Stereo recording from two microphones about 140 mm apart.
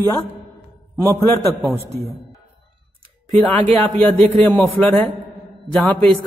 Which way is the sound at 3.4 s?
10° left (ahead or behind).